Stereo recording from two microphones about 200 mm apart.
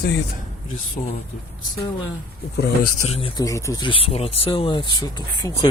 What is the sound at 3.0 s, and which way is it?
Speech, 30° left (ahead or behind).